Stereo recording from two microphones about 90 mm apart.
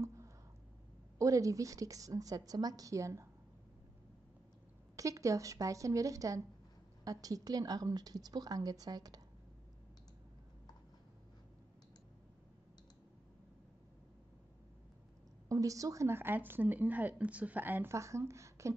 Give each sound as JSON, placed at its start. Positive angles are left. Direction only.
{"t": 0.0, "sound": "a sound", "side_deg": -35}
{"t": 1.1, "sound": "a woman's voice", "side_deg": -40}
{"t": 4.9, "sound": "a woman's voice", "side_deg": -35}
{"t": 15.4, "sound": "a woman's voice", "side_deg": -40}
{"t": 17.9, "sound": "a woman's voice", "side_deg": -35}